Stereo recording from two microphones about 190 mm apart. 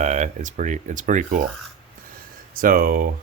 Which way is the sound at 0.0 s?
40° right (ahead or behind).